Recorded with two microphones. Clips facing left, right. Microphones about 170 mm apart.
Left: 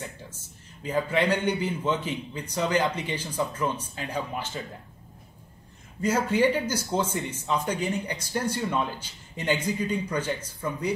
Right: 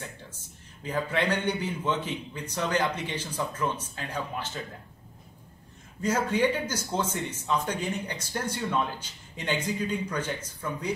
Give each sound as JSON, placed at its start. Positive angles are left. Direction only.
{"t": 0.8, "sound": "a man's voice", "side_deg": 10}
{"t": 5.9, "sound": "a man's voice", "side_deg": 10}